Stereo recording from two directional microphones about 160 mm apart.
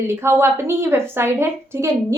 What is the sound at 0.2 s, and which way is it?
A woman's voice, 15° right (ahead or behind).